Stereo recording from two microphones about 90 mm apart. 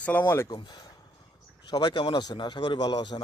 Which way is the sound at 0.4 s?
50° left (ahead or behind).